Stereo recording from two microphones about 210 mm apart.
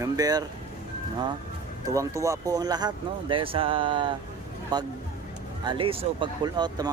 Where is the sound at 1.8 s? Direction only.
15° right (ahead or behind).